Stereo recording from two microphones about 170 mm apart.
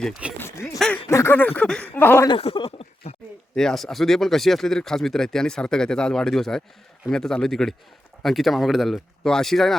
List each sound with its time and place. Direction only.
0.3 s a sound: 15° left (ahead or behind)
1.0 s speech: 15° left (ahead or behind)
2.2 s speech: 30° left (ahead or behind)
3.5 s speech: 5° left (ahead or behind)